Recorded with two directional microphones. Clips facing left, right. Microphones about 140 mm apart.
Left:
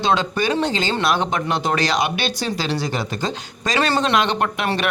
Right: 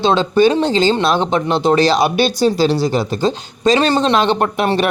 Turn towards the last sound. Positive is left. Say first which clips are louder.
# right 6 dB
turn(degrees=-35)  # may be behind; listen again after turning